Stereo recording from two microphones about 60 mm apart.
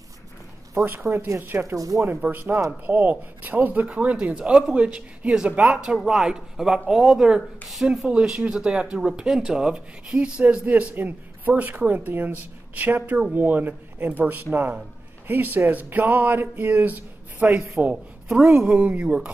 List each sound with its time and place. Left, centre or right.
1.0 s speech: right
1.8 s speech: right
2.0 s speech: right; by 7.4 s centre
7.7 s speech: centre
8.1 s speech: centre
18.3 s speech: centre